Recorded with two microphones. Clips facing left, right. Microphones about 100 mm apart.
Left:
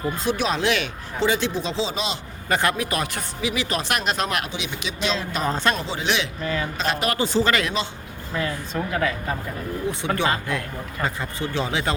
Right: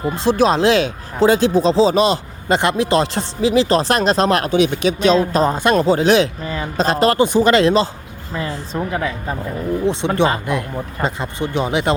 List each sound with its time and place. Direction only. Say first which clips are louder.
0.3 s speech: right 9 dB; 35° right (ahead or behind)
2.5 s speech: right 7 dB; 20° right (ahead or behind)
4.5 s speech: right 15 dB; 50° right (ahead or behind); by 7.2 s 35° right (ahead or behind)
7.2 s speech: right 7 dB; 20° right (ahead or behind)